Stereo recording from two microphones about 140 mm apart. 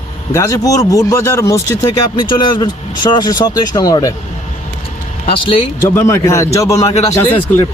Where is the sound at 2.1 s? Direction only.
35° left (ahead or behind).